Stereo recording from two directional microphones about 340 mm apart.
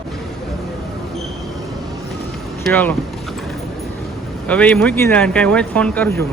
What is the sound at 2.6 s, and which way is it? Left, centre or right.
Speech, centre.